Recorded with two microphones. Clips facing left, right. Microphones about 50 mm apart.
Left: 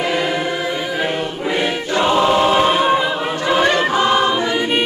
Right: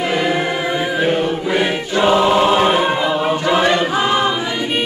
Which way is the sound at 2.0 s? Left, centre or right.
Centre.